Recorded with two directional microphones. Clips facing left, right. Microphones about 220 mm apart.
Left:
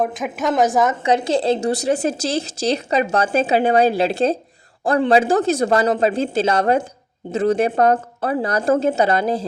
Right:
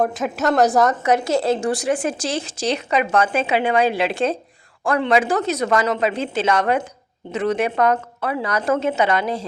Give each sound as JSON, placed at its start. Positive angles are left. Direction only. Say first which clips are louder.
{"t": 0.0, "sound": "a woman's voice", "louder": "right 1 dB", "side_deg": 0}
{"t": 1.0, "sound": "a woman's voice", "louder": "left 1 dB", "side_deg": 30}
{"t": 8.6, "sound": "a woman's voice", "louder": "left 2 dB", "side_deg": 45}